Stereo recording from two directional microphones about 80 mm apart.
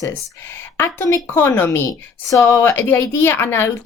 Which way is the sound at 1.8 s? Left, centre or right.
Left.